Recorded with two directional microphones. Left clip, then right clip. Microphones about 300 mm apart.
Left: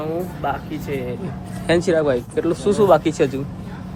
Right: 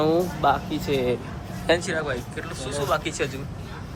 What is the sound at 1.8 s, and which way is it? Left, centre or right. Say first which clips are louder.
Speech: left 9 dB; centre.